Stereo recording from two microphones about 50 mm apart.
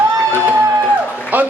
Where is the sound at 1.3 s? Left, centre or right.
Right.